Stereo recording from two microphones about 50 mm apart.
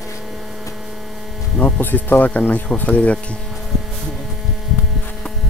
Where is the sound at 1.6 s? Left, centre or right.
Left.